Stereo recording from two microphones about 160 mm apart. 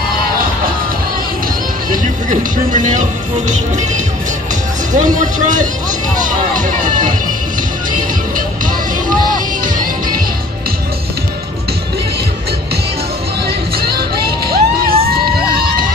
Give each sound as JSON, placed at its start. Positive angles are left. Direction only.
{"t": 2.2, "sound": "speech", "side_deg": -50}
{"t": 9.3, "sound": "music", "side_deg": -60}
{"t": 13.7, "sound": "crowd", "side_deg": -75}